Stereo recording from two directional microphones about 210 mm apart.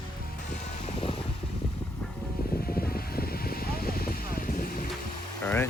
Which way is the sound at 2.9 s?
45° left (ahead or behind).